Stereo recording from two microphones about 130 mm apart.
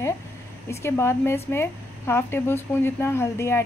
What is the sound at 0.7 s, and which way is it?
A woman's voice, 20° left (ahead or behind).